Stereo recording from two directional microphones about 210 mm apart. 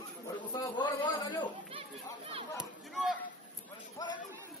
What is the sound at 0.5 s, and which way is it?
A man's voice, 20° left (ahead or behind).